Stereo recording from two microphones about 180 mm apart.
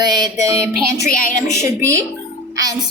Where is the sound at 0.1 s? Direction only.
20° right (ahead or behind).